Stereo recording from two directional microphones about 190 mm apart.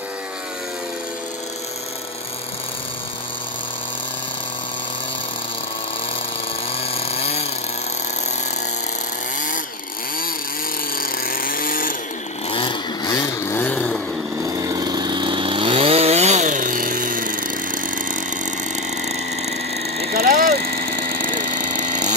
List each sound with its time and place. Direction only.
6.9 s chainsaw: 30° left (ahead or behind)
11.0 s chainsaw: 50° left (ahead or behind)
12.4 s chainsaw: 25° left (ahead or behind)
13.6 s chainsaw: 5° left (ahead or behind)
14.4 s chainsaw: 20° right (ahead or behind); by 18.5 s 45° right (ahead or behind)
20.1 s vehicle: 55° right (ahead or behind)